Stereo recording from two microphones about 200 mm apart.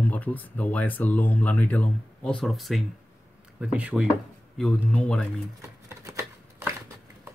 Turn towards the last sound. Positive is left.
turn(degrees=-15)  # may be behind; listen again after turning